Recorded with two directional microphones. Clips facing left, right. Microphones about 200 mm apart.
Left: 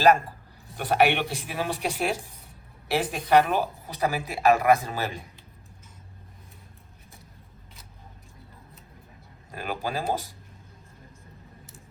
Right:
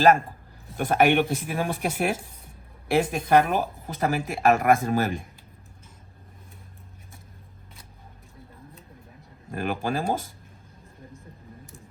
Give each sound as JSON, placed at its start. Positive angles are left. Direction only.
{"t": 0.8, "sound": "speech", "side_deg": -50}
{"t": 9.5, "sound": "speech", "side_deg": -50}